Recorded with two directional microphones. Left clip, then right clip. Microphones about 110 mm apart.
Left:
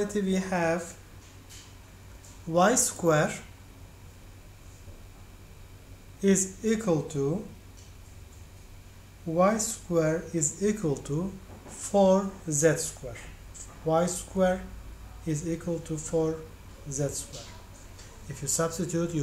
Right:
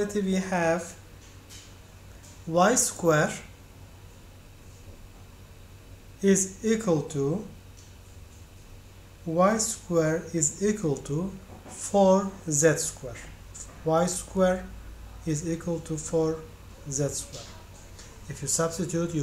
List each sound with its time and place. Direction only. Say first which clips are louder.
0.0 s speech: right 1 dB; 5° left (ahead or behind)
2.5 s speech: right 1 dB; centre (ahead or behind)
6.2 s speech: right 2 dB; 5° right (ahead or behind)
9.3 s speech: right 1 dB; 10° right (ahead or behind)
17.9 s a sound: right 2 dB; 10° right (ahead or behind)
18.6 s speech: right 1 dB; 5° right (ahead or behind)